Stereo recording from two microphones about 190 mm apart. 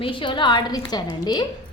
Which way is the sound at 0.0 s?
25° left (ahead or behind).